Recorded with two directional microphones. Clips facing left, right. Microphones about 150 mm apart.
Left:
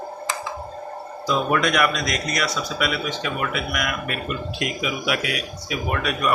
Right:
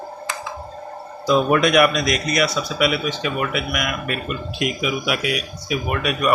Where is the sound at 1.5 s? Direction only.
15° right (ahead or behind).